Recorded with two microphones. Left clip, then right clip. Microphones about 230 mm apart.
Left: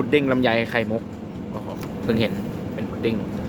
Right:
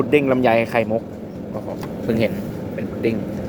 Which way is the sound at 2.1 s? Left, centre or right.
Centre.